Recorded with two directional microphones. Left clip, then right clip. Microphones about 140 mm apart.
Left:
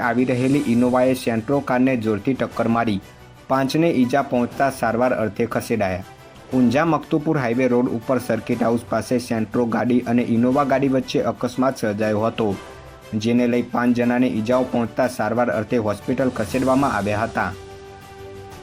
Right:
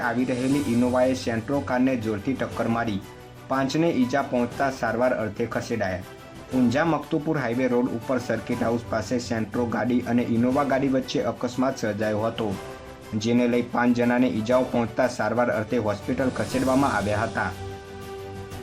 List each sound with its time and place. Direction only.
0.0 s speech: 15° left (ahead or behind)